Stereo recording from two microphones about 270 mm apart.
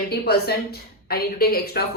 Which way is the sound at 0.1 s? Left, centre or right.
Left.